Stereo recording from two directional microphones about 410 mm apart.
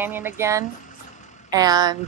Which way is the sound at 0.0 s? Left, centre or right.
Centre.